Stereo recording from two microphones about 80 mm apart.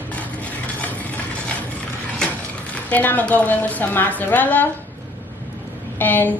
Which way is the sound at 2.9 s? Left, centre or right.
Left.